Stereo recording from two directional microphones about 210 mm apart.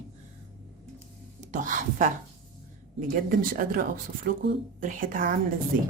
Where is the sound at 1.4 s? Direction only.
35° right (ahead or behind).